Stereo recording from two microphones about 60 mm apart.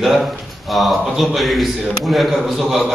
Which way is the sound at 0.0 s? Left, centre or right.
Centre.